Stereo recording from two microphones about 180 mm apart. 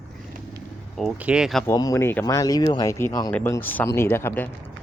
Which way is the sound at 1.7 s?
20° left (ahead or behind).